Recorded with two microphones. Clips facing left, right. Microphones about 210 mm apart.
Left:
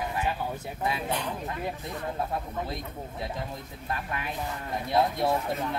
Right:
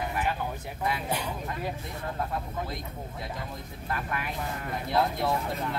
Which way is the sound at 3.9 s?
25° left (ahead or behind).